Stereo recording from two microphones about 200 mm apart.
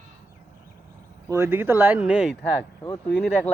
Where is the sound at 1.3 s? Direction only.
10° right (ahead or behind).